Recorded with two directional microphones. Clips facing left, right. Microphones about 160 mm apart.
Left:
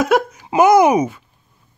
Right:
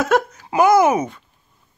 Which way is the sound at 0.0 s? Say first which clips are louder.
Left 2 dB; 10° left (ahead or behind).